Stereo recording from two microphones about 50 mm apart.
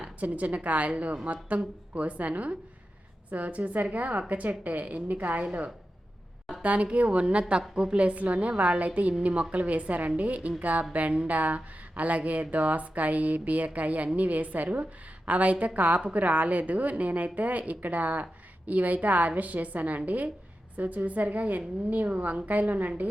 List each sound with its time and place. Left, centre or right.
0.0 s a woman's voice: right